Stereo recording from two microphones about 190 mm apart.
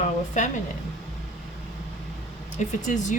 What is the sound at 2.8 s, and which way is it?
Speech, 40° left (ahead or behind).